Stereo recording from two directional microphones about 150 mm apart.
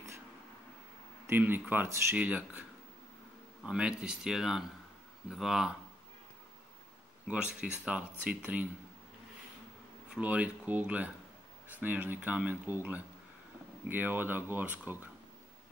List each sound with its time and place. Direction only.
1.2 s speech: 15° right (ahead or behind)
3.6 s speech: 5° right (ahead or behind)
7.2 s speech: 5° right (ahead or behind)
10.0 s speech: 5° right (ahead or behind)